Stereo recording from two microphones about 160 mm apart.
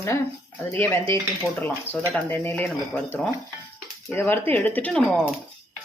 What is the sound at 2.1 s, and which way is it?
Speech, 10° left (ahead or behind).